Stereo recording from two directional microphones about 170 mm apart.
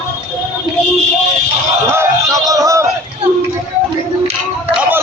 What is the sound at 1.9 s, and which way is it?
Music, 15° right (ahead or behind).